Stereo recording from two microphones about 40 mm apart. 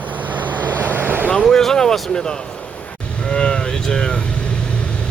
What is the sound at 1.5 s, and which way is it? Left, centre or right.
Speech, centre.